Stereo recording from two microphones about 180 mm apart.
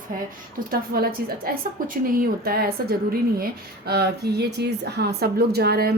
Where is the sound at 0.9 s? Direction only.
55° right (ahead or behind).